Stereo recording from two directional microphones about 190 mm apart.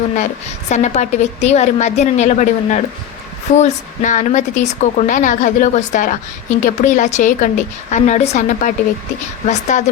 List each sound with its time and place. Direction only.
0.7 s a woman's voice: 40° left (ahead or behind)